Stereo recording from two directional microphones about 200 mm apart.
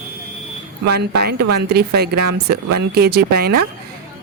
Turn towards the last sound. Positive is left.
turn(degrees=-50)  # may be behind; listen again after turning